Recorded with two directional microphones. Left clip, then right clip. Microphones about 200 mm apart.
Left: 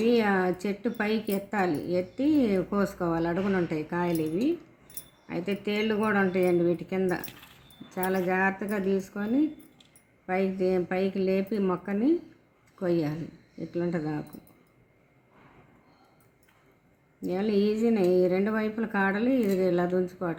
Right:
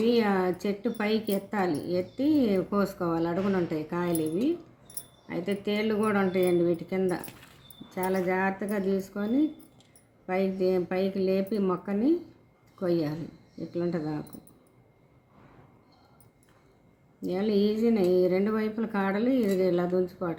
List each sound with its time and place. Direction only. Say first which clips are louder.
0.0 s a woman's voice: left 1 dB; 15° left (ahead or behind)
17.2 s a woman's voice: even; 15° left (ahead or behind)